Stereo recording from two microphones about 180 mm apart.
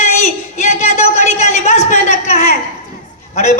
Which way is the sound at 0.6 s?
40° left (ahead or behind).